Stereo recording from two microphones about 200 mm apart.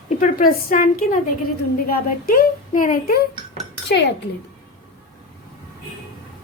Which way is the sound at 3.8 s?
60° left (ahead or behind).